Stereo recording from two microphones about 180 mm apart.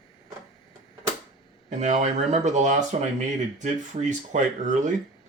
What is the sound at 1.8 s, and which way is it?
Speech, 40° right (ahead or behind).